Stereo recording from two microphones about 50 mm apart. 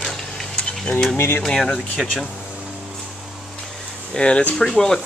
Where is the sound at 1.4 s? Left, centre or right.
Centre.